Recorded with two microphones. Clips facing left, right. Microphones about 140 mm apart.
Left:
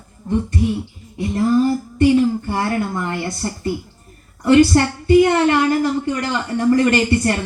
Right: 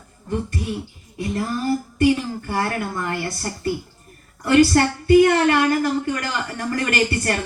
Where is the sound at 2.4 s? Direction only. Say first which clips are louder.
Left 3 dB; 25° left (ahead or behind).